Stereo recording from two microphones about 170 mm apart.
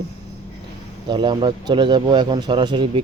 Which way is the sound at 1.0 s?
25° right (ahead or behind).